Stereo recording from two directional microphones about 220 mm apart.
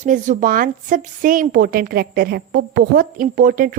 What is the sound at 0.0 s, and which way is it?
A woman's voice, 35° right (ahead or behind).